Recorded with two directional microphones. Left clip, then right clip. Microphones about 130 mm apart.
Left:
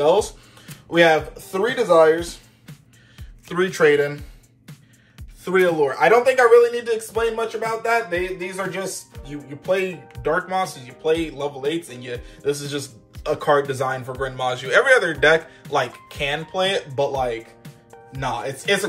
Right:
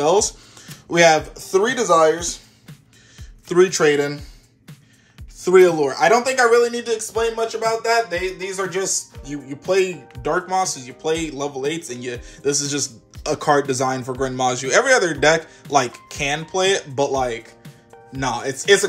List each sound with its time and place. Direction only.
0.0 s speech: 60° right (ahead or behind)
3.4 s speech: 35° right (ahead or behind)
5.4 s speech: 40° right (ahead or behind); by 8.9 s 55° right (ahead or behind)
9.3 s speech: 45° right (ahead or behind); by 17.4 s 90° right
17.6 s music: centre (ahead or behind)
18.2 s speech: 80° right